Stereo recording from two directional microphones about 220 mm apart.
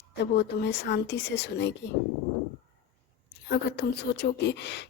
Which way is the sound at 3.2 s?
50° left (ahead or behind).